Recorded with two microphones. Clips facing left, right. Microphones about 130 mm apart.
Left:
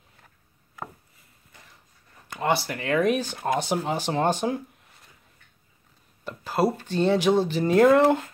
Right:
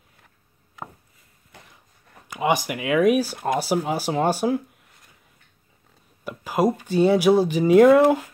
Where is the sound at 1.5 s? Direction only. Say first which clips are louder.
Right 5 dB; 75° right (ahead or behind).